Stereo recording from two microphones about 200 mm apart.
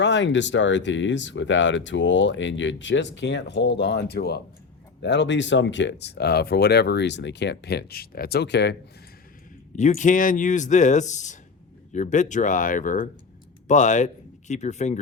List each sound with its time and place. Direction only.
0.0 s speech: 65° left (ahead or behind)
9.7 s speech: 35° left (ahead or behind)